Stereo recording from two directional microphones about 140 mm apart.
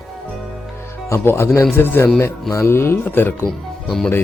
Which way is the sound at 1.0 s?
20° left (ahead or behind).